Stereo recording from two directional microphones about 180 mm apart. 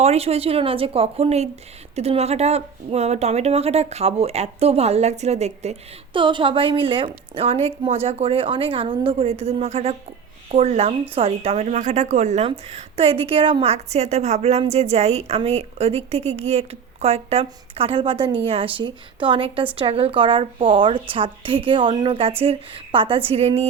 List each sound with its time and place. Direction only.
0.0 s a woman's voice: 35° right (ahead or behind)